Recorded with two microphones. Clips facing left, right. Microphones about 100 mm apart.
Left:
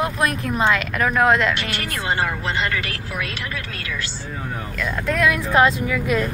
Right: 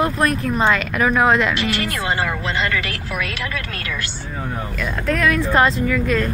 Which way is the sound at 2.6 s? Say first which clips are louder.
Right 2 dB; 90° right.